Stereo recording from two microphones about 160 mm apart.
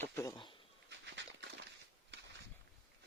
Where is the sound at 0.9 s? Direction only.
90° right.